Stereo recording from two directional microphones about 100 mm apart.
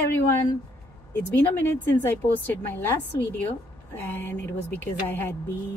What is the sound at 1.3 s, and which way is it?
A woman's voice, 20° left (ahead or behind).